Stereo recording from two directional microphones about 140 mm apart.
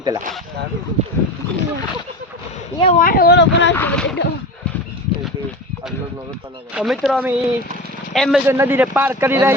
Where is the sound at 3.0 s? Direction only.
90° left.